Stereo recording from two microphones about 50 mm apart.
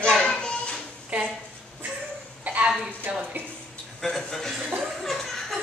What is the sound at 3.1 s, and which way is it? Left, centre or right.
Speech, right.